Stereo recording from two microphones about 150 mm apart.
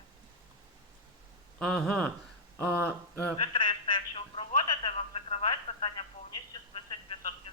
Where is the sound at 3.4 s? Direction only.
35° left (ahead or behind).